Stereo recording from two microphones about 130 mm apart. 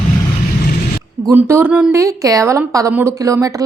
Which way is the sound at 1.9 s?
25° right (ahead or behind).